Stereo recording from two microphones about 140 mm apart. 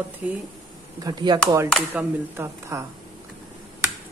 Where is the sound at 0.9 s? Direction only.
30° right (ahead or behind).